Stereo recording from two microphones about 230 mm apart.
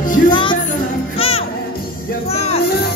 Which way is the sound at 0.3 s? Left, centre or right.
Left.